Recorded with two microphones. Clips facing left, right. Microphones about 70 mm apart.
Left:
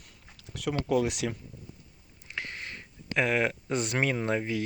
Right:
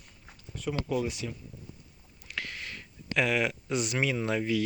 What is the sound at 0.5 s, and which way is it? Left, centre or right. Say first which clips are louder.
Speech: left 4 dB; left.